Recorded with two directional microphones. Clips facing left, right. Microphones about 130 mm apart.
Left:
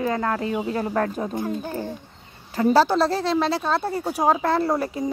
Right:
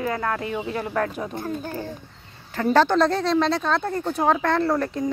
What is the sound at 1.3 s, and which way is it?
A woman's voice, 15° left (ahead or behind).